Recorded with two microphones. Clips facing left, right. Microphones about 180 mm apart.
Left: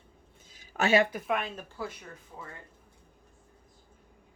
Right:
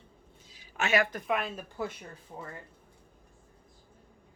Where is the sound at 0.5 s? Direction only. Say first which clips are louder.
Left 4 dB; 45° left (ahead or behind).